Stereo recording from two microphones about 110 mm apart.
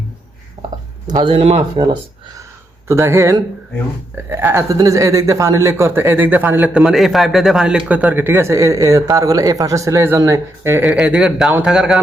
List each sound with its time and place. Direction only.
1.1 s speech: 50° right (ahead or behind)
2.8 s speech: 25° right (ahead or behind)
6.8 s speech: centre (ahead or behind); by 10.9 s 20° right (ahead or behind)
11.0 s speech: 5° right (ahead or behind)